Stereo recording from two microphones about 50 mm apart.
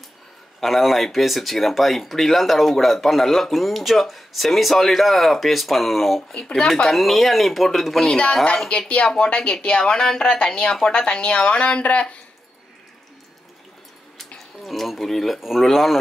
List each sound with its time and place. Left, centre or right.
0.6 s speech: centre
8.6 s speech: left
14.6 s speech: centre